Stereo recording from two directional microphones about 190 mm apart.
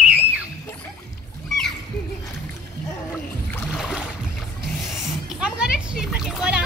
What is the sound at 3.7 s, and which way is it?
Boat, centre (ahead or behind).